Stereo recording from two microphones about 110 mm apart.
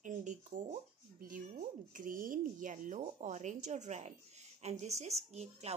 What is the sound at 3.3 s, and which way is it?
A woman's voice, 90° right.